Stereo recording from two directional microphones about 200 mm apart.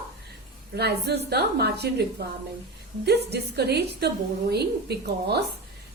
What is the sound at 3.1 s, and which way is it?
A woman's voice, 55° right (ahead or behind).